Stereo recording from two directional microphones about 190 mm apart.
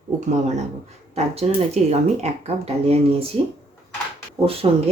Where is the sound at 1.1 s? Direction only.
35° right (ahead or behind).